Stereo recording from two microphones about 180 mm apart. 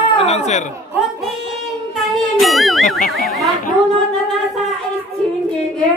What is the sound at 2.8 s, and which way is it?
Speech, 50° left (ahead or behind).